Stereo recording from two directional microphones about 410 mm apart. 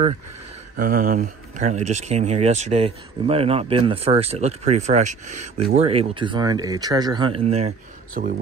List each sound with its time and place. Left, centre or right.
0.7 s speech: centre